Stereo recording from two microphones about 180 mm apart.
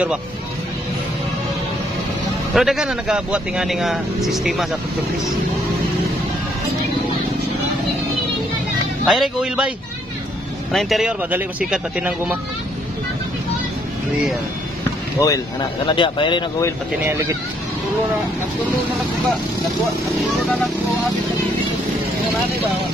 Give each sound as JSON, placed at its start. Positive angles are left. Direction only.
{"t": 2.5, "sound": "a man's voice", "side_deg": 0}
{"t": 9.0, "sound": "a man's voice", "side_deg": 0}
{"t": 10.7, "sound": "a man's voice", "side_deg": 0}
{"t": 15.1, "sound": "speech", "side_deg": 20}
{"t": 17.0, "sound": "speech", "side_deg": -15}
{"t": 20.3, "sound": "speech", "side_deg": 10}